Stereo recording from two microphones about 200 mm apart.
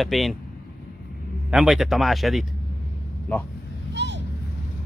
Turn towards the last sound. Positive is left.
turn(degrees=-60)  # may be behind; listen again after turning